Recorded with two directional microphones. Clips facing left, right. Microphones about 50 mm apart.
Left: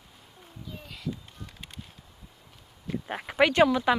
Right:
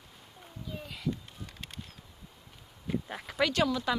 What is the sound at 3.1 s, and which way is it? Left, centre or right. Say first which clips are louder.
Speech: left 8 dB; left.